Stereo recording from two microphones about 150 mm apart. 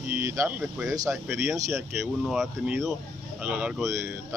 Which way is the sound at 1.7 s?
Centre (ahead or behind).